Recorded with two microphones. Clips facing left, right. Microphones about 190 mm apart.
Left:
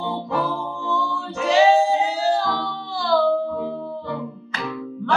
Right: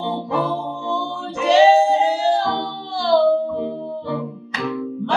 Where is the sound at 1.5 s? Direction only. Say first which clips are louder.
Right 3 dB; 30° right (ahead or behind).